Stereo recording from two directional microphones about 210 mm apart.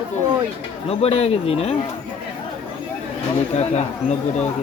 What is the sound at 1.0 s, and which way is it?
Speech, 30° left (ahead or behind).